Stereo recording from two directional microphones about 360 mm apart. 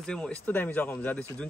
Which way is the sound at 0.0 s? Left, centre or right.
Centre.